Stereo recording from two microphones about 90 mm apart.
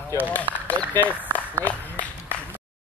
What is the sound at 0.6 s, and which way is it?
Speech, 20° left (ahead or behind).